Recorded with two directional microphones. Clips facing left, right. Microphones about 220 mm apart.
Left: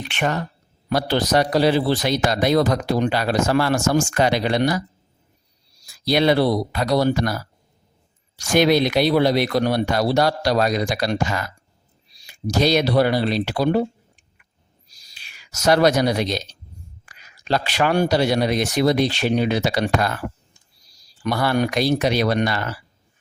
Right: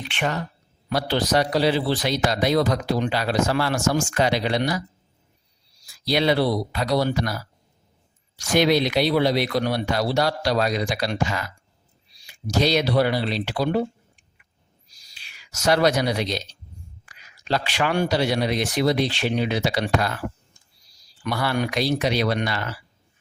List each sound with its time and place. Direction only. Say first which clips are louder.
0.1 s a man's voice: left 3 dB; 45° left (ahead or behind)
5.8 s a man's voice: left 3 dB; 45° left (ahead or behind)
14.8 s a sound: left 2 dB; 40° left (ahead or behind)
17.1 s a man's voice: left 3 dB; 45° left (ahead or behind)
21.2 s a man's voice: left 4 dB; 40° left (ahead or behind)